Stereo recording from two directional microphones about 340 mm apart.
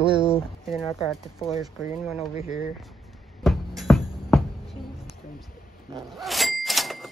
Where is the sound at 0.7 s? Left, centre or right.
Centre.